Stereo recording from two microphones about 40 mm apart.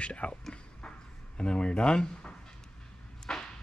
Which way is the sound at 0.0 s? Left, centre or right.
Left.